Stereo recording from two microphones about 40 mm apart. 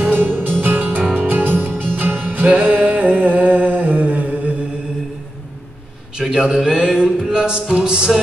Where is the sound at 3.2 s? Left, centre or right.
Right.